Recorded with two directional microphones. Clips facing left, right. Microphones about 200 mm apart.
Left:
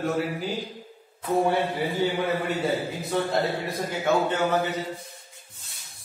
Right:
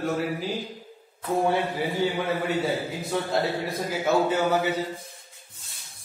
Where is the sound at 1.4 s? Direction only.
Centre (ahead or behind).